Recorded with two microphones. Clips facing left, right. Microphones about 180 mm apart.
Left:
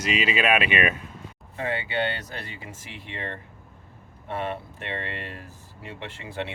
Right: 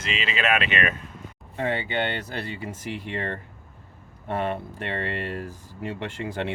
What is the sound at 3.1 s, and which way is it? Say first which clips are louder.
Speech: right 5 dB; 45° right (ahead or behind).